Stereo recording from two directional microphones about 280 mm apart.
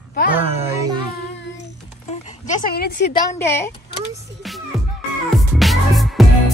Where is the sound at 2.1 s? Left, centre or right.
Left.